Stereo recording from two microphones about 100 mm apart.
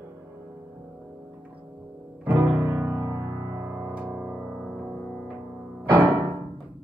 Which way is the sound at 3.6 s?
15° right (ahead or behind).